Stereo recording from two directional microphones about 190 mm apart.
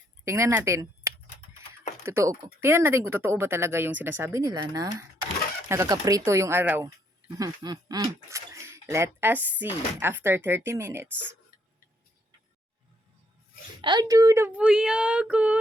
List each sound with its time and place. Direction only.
0.3 s speech: 15° right (ahead or behind)
13.8 s speech: 20° right (ahead or behind)